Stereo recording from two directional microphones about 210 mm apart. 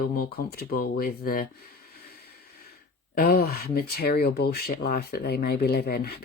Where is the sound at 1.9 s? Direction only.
50° left (ahead or behind).